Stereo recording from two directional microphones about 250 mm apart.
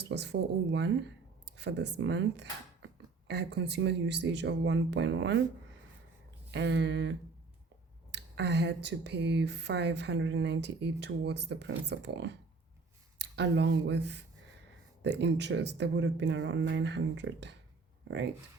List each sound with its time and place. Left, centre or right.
0.1 s speech: right
6.5 s speech: right